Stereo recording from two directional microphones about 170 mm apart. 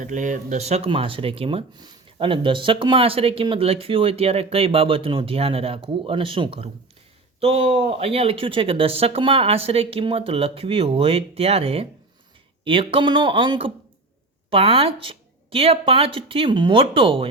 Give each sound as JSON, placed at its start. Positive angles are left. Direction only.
{"t": 0.0, "sound": "speech", "side_deg": -50}